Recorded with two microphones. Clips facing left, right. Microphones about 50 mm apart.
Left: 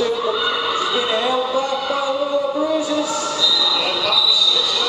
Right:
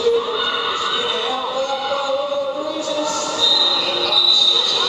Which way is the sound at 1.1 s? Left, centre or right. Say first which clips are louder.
Left 3 dB; centre.